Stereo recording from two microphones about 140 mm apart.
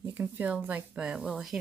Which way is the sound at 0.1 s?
15° right (ahead or behind).